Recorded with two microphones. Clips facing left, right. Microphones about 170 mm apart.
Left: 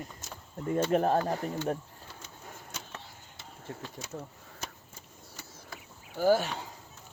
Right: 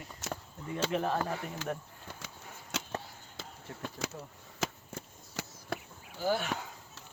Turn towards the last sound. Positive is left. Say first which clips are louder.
# left 7 dB
turn(degrees=45)  # may be behind; listen again after turning